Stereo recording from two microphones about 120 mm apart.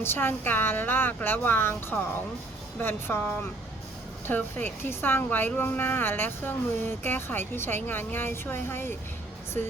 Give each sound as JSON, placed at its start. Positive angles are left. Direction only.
{"t": 0.0, "sound": "a woman's voice", "side_deg": 20}